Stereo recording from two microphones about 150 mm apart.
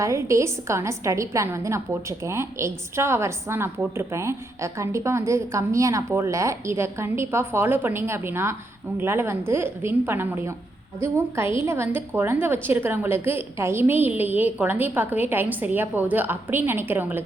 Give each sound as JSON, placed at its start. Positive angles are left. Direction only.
{"t": 0.0, "sound": "a woman's voice", "side_deg": -20}